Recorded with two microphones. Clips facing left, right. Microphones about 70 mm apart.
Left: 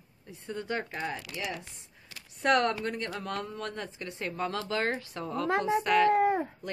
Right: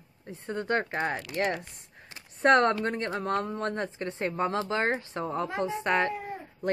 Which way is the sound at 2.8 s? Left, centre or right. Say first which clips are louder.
Right 4 dB; right.